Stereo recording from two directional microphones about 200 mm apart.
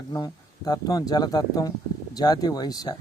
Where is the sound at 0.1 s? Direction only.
20° left (ahead or behind).